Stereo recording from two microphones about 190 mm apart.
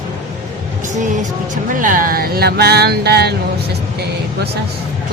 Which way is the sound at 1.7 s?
45° right (ahead or behind).